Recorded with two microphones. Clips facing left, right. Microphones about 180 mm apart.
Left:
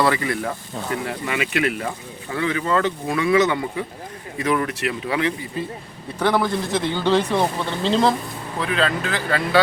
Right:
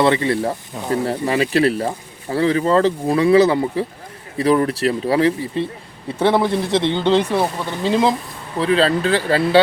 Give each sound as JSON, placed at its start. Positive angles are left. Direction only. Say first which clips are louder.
{"t": 0.0, "sound": "a man's voice", "louder": "right 4 dB", "side_deg": -25}
{"t": 8.5, "sound": "speech", "louder": "right 6 dB", "side_deg": -30}